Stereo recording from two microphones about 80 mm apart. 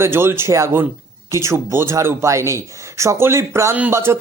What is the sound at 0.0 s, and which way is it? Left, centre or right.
Speech, right.